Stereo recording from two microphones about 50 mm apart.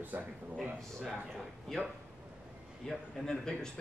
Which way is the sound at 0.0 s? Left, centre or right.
Right.